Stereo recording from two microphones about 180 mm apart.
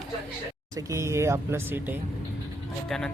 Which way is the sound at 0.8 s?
15° right (ahead or behind).